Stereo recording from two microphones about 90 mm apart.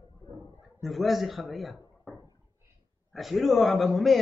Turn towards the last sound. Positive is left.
turn(degrees=0)  # may be behind; listen again after turning